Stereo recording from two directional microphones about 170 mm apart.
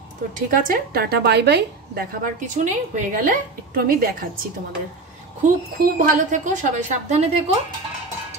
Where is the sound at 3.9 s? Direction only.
60° right (ahead or behind).